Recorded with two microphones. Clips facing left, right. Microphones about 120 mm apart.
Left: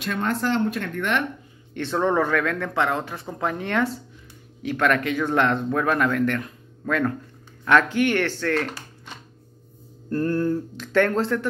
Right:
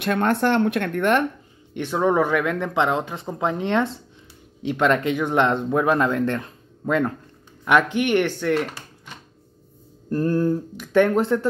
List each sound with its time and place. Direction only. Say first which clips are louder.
0.0 s speech: right 5 dB; 60° right (ahead or behind)
1.7 s speech: right 2 dB; 10° right (ahead or behind)
10.0 s speech: right 2 dB; 15° right (ahead or behind)